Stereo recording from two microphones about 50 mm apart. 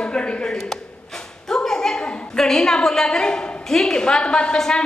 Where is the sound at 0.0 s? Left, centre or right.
Left.